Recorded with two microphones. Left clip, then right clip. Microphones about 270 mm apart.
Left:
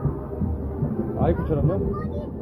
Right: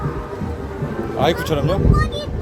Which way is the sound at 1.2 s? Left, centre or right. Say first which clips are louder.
Right 7 dB; right.